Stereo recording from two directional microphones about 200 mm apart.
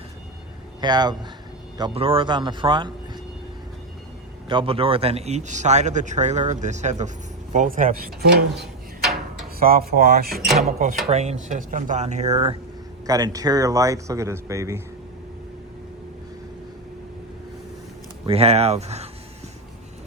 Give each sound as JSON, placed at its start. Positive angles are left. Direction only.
{"t": 0.8, "sound": "a man's voice", "side_deg": -20}
{"t": 4.4, "sound": "a man's voice", "side_deg": -25}
{"t": 9.6, "sound": "speech", "side_deg": -50}
{"t": 10.6, "sound": "a man's voice", "side_deg": -40}
{"t": 13.1, "sound": "speech", "side_deg": -15}
{"t": 18.3, "sound": "a man's voice", "side_deg": -30}